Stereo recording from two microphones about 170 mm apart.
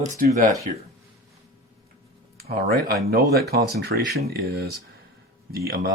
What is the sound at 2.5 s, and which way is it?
Speech, 65° right (ahead or behind).